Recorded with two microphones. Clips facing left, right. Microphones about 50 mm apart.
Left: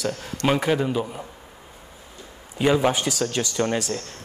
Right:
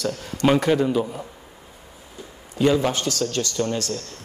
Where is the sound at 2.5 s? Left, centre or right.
Centre.